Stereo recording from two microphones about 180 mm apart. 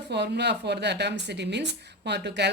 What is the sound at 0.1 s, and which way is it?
A woman's voice, 70° right (ahead or behind).